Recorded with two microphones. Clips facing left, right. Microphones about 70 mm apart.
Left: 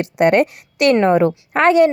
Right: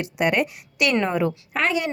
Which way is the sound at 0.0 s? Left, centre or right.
Left.